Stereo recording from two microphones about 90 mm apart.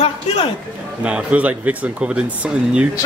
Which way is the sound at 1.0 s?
15° right (ahead or behind).